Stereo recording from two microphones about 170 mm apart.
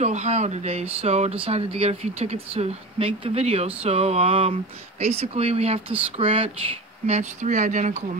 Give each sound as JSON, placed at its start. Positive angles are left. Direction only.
{"t": 0.0, "sound": "speech", "side_deg": -40}